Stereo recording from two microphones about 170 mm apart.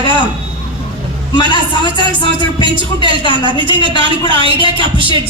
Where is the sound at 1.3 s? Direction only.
30° left (ahead or behind).